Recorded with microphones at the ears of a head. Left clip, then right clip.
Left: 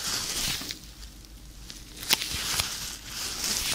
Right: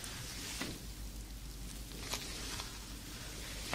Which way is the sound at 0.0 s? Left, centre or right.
Left.